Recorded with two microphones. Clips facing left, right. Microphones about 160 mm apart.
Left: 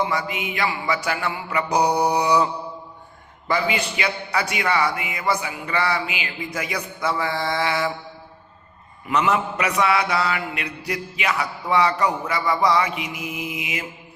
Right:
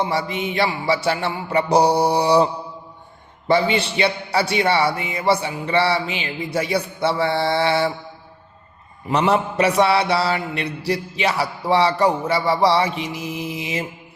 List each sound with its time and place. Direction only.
0.0 s mantra: 30° right (ahead or behind)
9.0 s mantra: 35° right (ahead or behind)